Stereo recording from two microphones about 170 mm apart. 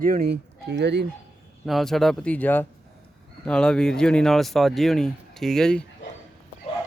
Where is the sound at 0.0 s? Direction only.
60° right (ahead or behind); by 1.0 s 85° right.